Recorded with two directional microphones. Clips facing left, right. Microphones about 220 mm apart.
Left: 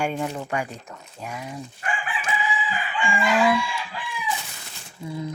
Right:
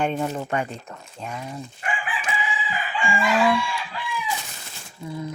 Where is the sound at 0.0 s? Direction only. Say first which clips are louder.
Right 2 dB; 10° left (ahead or behind).